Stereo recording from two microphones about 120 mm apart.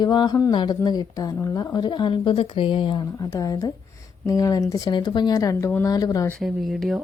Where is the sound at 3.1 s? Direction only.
25° left (ahead or behind).